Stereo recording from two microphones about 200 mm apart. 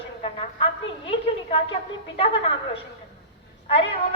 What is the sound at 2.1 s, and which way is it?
Speech, 25° left (ahead or behind).